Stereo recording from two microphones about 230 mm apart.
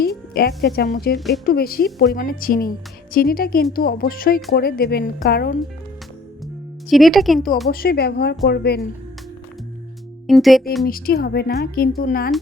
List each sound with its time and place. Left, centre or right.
0.0 s a woman's voice: left
6.9 s speech: centre
7.7 s speech: left
10.2 s speech: centre
10.8 s speech: left